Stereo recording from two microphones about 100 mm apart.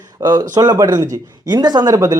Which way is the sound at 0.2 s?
45° right (ahead or behind).